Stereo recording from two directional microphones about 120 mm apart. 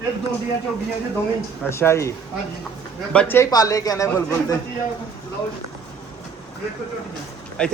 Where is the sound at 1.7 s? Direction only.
20° left (ahead or behind).